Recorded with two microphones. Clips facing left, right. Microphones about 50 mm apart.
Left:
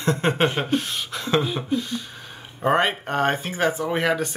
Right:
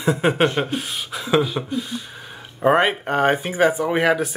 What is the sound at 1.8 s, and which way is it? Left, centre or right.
Speech, centre.